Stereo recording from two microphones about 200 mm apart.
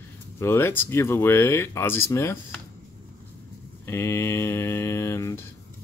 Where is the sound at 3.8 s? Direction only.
10° left (ahead or behind).